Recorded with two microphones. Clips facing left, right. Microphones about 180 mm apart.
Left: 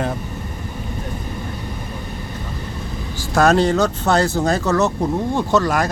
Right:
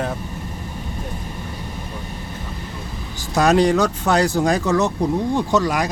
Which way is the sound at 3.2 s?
15° right (ahead or behind).